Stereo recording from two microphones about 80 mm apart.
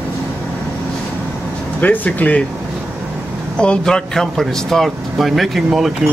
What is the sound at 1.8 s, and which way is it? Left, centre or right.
Speech, left.